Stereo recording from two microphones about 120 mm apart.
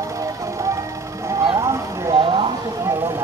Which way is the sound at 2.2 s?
45° right (ahead or behind).